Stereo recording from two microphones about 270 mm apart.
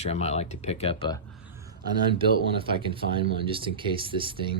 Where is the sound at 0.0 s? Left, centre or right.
Left.